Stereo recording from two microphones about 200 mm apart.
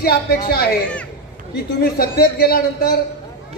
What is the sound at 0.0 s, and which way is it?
Speech, 50° left (ahead or behind).